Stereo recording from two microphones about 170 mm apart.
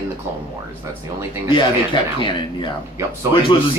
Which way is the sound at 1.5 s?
30° left (ahead or behind).